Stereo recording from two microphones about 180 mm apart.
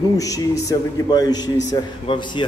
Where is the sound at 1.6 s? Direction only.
40° left (ahead or behind).